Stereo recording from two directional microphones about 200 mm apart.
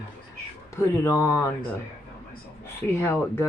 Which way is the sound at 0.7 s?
15° left (ahead or behind).